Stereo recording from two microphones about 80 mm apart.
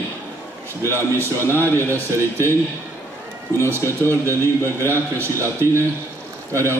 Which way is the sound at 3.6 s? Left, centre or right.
Right.